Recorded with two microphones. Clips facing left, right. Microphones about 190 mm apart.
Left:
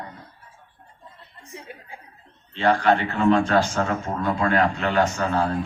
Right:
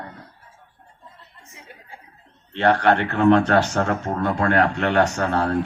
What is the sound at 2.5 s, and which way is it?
Speech, 65° right (ahead or behind).